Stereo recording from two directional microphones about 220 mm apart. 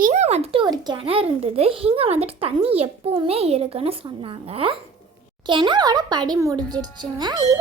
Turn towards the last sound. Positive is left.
turn(degrees=-20)  # may be behind; listen again after turning